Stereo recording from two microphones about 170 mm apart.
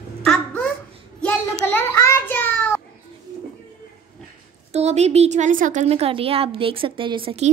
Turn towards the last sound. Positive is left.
turn(degrees=-30)  # may be behind; listen again after turning